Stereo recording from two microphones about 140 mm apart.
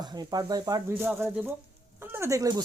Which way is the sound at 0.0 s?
30° right (ahead or behind).